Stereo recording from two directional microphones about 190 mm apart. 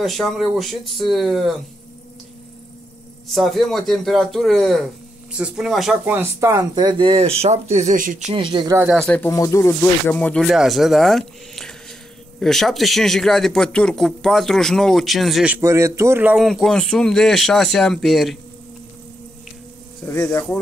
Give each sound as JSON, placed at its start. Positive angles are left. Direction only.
{"t": 0.0, "sound": "speech", "side_deg": 0}
{"t": 3.3, "sound": "speech", "side_deg": 0}
{"t": 8.4, "sound": "speech", "side_deg": -25}
{"t": 8.9, "sound": "speech", "side_deg": 10}
{"t": 20.1, "sound": "speech", "side_deg": 15}